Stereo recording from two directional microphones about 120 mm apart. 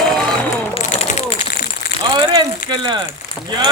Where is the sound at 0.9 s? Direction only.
60° left (ahead or behind).